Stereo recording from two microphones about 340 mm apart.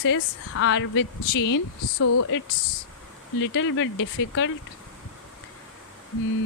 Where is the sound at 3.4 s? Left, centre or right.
Left.